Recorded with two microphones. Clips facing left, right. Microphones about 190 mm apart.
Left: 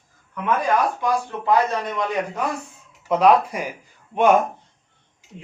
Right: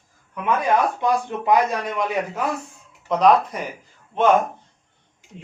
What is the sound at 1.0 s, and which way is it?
A man's voice, 20° right (ahead or behind).